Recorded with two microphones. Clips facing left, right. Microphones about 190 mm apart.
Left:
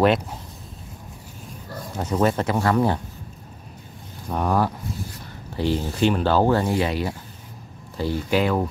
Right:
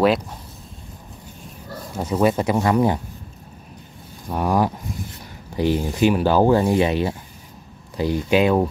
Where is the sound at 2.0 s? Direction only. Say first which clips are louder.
Right 2 dB; 10° right (ahead or behind).